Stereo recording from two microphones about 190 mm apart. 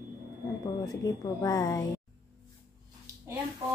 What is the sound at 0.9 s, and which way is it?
Speech, 20° left (ahead or behind).